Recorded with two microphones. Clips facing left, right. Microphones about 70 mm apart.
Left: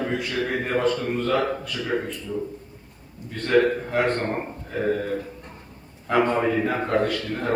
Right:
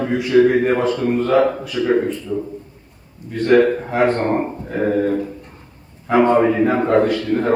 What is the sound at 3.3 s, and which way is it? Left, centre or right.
Speech, centre.